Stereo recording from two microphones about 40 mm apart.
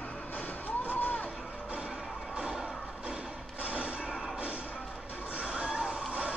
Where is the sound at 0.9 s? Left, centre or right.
Left.